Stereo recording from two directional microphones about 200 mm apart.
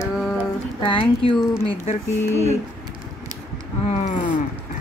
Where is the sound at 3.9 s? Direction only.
35° left (ahead or behind).